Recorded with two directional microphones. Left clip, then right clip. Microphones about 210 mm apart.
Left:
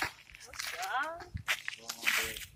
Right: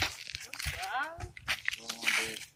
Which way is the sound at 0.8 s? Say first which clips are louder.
Left 2 dB; 10° left (ahead or behind).